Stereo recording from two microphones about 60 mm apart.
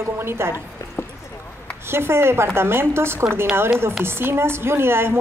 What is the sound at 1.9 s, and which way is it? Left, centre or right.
A woman's voice, right.